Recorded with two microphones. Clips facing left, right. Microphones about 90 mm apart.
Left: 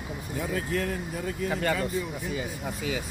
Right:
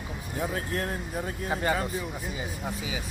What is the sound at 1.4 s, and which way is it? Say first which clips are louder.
Speech: even; 25° right (ahead or behind).